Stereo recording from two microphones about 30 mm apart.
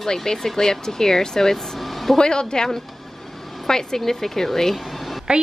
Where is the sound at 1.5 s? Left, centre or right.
Centre.